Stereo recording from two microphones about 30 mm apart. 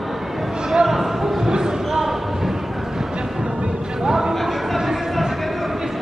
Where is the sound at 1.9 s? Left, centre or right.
Centre.